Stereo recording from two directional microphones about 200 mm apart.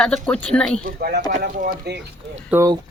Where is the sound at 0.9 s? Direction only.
50° right (ahead or behind).